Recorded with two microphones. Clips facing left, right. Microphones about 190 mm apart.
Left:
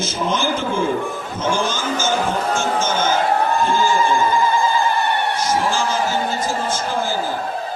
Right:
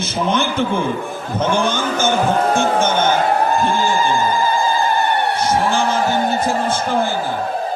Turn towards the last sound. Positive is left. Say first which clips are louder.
# right 4 dB
turn(degrees=-60)  # may be behind; listen again after turning